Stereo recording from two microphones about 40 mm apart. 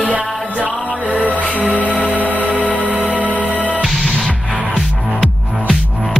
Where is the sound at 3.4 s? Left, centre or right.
Left.